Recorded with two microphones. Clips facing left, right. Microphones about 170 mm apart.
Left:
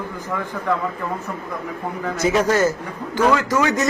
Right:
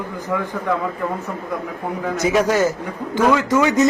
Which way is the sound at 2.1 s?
10° right (ahead or behind).